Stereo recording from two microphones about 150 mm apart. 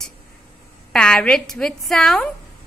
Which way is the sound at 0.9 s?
5° left (ahead or behind).